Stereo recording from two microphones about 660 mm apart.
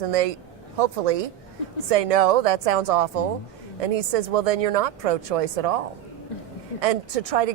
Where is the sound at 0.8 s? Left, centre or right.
Right.